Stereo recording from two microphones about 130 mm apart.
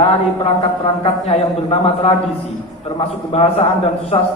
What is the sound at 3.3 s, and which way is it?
Speech, 50° left (ahead or behind).